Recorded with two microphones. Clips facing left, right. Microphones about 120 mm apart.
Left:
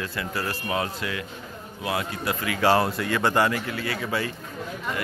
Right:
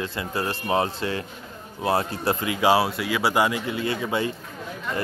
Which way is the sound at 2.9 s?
5° right (ahead or behind).